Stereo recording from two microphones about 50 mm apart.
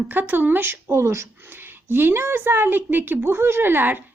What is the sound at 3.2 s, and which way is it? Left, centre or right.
Speech, right.